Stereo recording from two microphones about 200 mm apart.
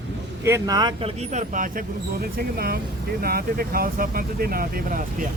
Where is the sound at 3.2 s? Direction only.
50° right (ahead or behind).